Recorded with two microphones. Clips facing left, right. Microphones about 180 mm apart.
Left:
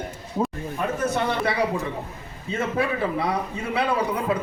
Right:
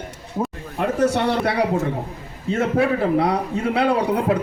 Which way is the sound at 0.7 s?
80° right.